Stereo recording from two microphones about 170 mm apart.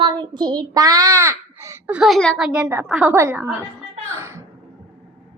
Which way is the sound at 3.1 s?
15° right (ahead or behind).